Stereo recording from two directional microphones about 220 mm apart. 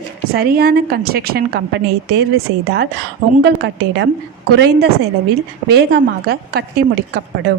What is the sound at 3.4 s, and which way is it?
Speech, 50° right (ahead or behind).